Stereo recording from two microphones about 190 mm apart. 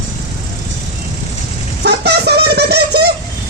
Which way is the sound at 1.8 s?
60° right (ahead or behind).